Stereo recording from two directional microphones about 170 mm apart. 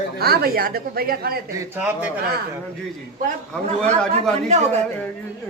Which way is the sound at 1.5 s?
10° right (ahead or behind).